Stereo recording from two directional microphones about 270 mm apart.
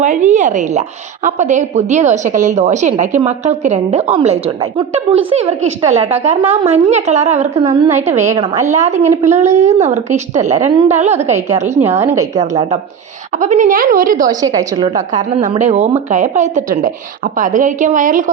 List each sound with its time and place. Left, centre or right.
0.0 s a woman's voice: right
11.9 s a woman's voice: centre
12.4 s a woman's voice: right
14.3 s a woman's voice: centre